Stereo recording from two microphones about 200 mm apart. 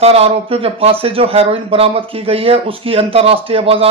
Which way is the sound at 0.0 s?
30° right (ahead or behind).